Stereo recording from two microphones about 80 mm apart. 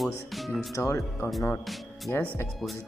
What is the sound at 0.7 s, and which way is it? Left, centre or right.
Speech, left.